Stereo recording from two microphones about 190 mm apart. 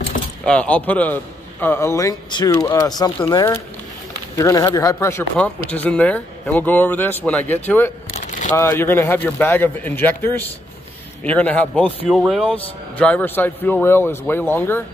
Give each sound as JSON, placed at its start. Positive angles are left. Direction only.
{"t": 0.5, "sound": "speech", "side_deg": 5}
{"t": 8.1, "sound": "a sound", "side_deg": 40}
{"t": 8.5, "sound": "speech", "side_deg": 15}